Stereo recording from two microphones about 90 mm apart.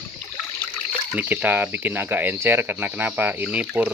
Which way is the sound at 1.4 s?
20° right (ahead or behind).